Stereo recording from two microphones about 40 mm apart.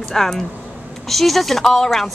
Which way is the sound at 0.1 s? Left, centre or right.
Centre.